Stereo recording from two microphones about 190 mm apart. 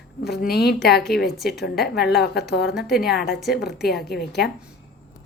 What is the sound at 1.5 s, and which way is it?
Speech, 60° left (ahead or behind).